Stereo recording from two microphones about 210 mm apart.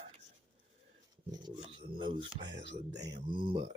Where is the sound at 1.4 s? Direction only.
25° right (ahead or behind).